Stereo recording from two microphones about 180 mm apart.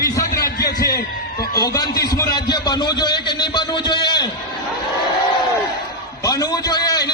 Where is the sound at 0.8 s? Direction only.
55° left (ahead or behind).